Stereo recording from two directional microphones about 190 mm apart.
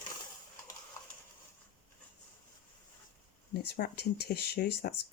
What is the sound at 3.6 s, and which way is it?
Speech, 55° left (ahead or behind).